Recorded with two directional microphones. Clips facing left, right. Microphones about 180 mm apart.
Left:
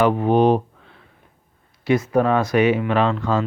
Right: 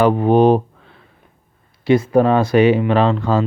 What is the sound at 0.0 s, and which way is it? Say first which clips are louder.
Speech: right 3 dB; 35° right (ahead or behind).